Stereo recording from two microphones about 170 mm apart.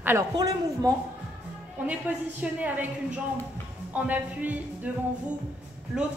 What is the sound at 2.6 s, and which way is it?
Speech, 10° right (ahead or behind).